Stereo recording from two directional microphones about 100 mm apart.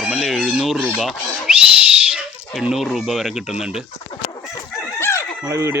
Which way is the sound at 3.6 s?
5° right (ahead or behind).